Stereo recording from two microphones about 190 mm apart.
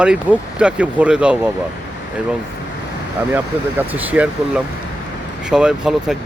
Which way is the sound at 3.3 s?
10° right (ahead or behind).